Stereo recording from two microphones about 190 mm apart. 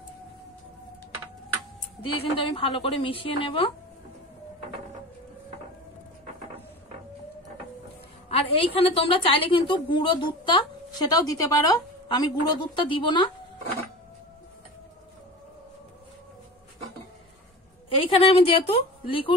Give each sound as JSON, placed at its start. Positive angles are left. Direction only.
{"t": 2.3, "sound": "a woman's voice", "side_deg": 25}
{"t": 8.3, "sound": "a woman's voice", "side_deg": 30}
{"t": 17.8, "sound": "a woman's voice", "side_deg": 30}